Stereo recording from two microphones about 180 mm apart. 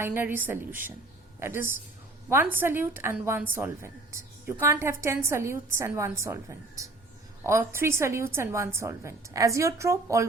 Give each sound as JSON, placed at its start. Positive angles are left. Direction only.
{"t": 0.0, "sound": "a woman's voice", "side_deg": -10}